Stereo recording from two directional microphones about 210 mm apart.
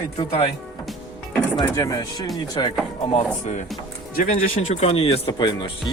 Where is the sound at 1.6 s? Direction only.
15° left (ahead or behind).